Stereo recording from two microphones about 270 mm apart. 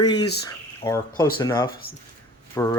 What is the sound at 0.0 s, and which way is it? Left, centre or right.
Speech, centre.